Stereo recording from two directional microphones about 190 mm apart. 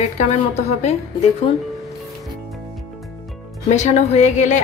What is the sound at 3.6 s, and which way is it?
Speech, 35° left (ahead or behind).